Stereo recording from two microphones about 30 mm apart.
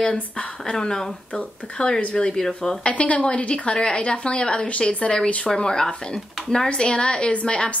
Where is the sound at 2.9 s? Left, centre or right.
Left.